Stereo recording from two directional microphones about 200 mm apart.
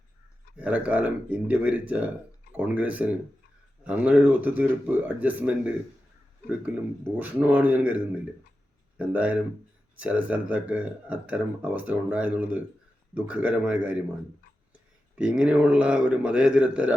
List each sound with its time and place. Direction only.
0.5 s speech: 5° right (ahead or behind)
7.2 s a man's voice: 10° right (ahead or behind)
15.1 s a man's voice: 5° right (ahead or behind)